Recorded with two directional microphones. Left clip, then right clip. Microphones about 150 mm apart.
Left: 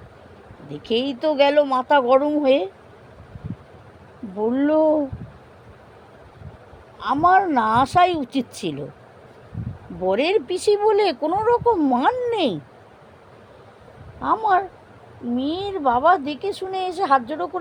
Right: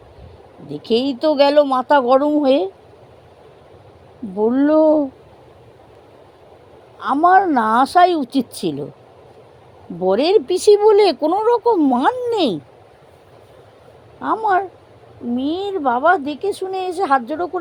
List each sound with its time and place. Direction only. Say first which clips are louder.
0.7 s speech: right 4 dB; 60° right (ahead or behind)
4.4 s a woman's voice: right 4 dB; 50° right (ahead or behind)
7.0 s a woman's voice: right 4 dB; 50° right (ahead or behind)
10.0 s speech: right 5 dB; 55° right (ahead or behind)
14.2 s a woman's voice: right 2 dB; 45° right (ahead or behind)